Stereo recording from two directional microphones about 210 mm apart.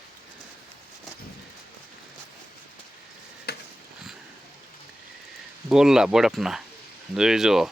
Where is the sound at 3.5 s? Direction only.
50° left (ahead or behind).